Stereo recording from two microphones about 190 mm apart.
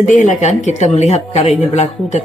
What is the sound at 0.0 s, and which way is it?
Speech, 40° left (ahead or behind).